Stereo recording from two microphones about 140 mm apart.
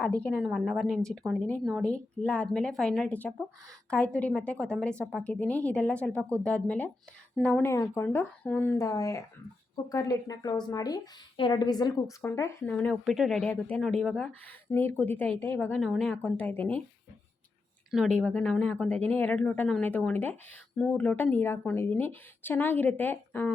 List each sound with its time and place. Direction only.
0.0 s speech: 10° left (ahead or behind)
0.4 s speech: centre (ahead or behind)
7.6 s a woman's voice: 20° left (ahead or behind)
12.6 s speech: 10° left (ahead or behind)
14.7 s speech: 15° left (ahead or behind)
17.9 s speech: 5° left (ahead or behind)